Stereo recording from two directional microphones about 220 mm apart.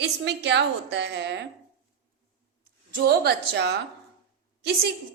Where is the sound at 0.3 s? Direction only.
50° right (ahead or behind).